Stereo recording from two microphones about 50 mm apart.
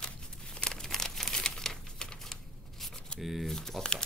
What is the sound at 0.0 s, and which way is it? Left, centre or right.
Crumpling, centre.